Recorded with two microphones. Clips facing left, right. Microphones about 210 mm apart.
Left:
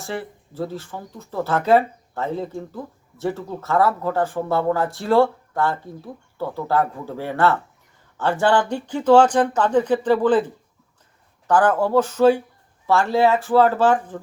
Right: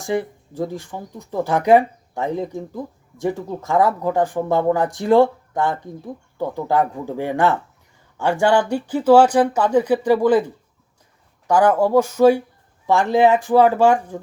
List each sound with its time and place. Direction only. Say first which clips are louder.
0.0 s speech: right 7 dB; 15° right (ahead or behind)